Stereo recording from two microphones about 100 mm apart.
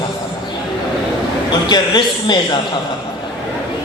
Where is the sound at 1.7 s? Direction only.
45° left (ahead or behind).